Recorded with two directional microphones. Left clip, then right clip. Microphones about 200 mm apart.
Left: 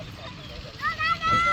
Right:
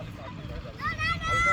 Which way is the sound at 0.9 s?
50° right (ahead or behind).